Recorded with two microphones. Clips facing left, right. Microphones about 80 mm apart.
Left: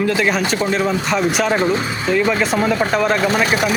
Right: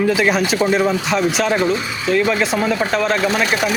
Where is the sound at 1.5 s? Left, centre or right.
Left.